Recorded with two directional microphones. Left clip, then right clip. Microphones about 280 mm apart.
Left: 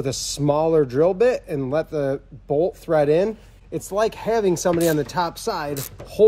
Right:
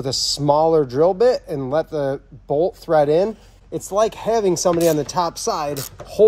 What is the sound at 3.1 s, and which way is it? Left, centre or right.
Speech, centre.